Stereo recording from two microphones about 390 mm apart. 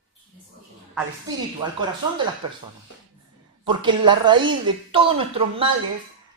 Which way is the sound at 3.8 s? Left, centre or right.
Centre.